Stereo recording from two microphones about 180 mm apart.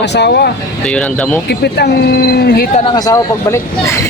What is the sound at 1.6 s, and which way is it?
Speech, 60° left (ahead or behind).